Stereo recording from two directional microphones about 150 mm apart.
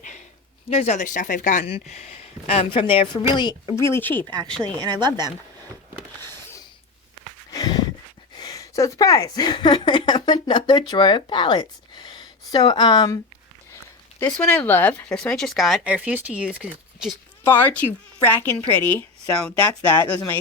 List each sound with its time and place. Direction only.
0.7 s speech: 50° left (ahead or behind)
1.6 s speech: 45° left (ahead or behind)
3.8 s speech: 15° left (ahead or behind)
4.8 s speech: 30° right (ahead or behind)
7.5 s a sound: 25° left (ahead or behind)
8.4 s speech: 25° left (ahead or behind)
14.2 s speech: 10° left (ahead or behind); by 17.2 s 5° right (ahead or behind)
17.4 s speech: 10° left (ahead or behind)